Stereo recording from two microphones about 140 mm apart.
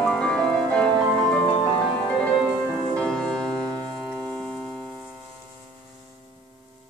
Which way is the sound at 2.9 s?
5° left (ahead or behind).